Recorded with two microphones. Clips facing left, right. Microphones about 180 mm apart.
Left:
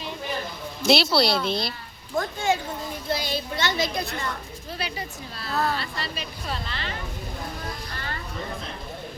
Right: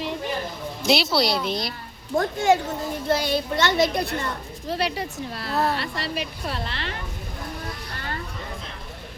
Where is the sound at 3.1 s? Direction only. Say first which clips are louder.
Right 5 dB; 55° right (ahead or behind).